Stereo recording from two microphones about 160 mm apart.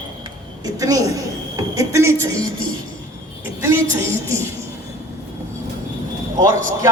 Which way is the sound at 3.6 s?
15° right (ahead or behind).